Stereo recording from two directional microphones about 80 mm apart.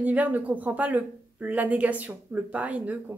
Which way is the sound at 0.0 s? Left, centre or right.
Centre.